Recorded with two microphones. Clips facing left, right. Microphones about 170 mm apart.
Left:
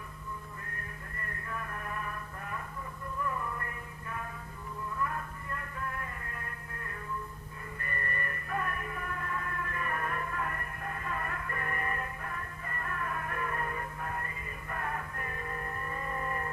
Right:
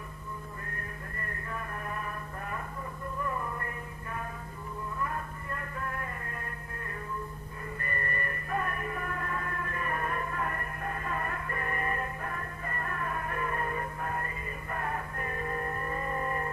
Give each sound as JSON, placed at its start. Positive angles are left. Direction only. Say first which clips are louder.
{"t": 1.5, "sound": "music", "louder": "right 1 dB", "side_deg": -30}
{"t": 5.5, "sound": "music", "louder": "right 2 dB", "side_deg": -50}
{"t": 7.9, "sound": "music", "louder": "right 2 dB", "side_deg": -35}
{"t": 14.8, "sound": "music", "louder": "right 2 dB", "side_deg": -35}